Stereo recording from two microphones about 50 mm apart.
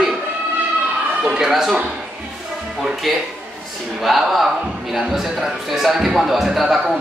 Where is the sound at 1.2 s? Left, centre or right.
Centre.